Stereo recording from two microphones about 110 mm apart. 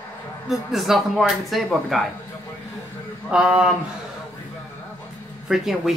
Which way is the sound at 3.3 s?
10° right (ahead or behind).